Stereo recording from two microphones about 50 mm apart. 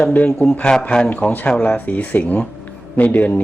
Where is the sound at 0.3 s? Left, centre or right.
Centre.